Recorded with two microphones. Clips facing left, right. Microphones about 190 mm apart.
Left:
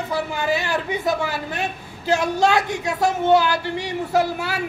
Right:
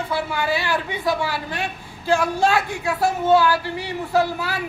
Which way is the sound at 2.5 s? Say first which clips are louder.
Left 1 dB; 40° left (ahead or behind).